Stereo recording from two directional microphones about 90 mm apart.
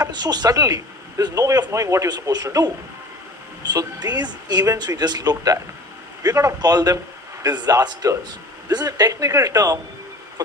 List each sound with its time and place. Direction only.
0.0 s a man's voice: 50° right (ahead or behind)
2.1 s speech: 45° right (ahead or behind)